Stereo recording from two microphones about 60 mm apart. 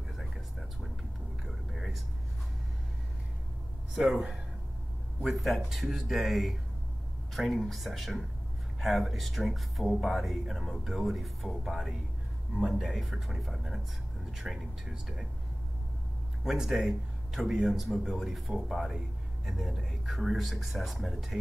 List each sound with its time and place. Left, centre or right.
1.4 s whispering: centre
5.2 s speech: centre
16.4 s speech: centre